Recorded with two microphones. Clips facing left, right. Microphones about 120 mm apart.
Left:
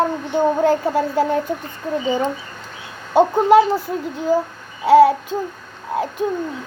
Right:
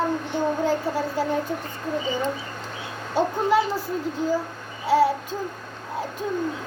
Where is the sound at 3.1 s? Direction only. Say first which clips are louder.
Left 9 dB; 60° left (ahead or behind).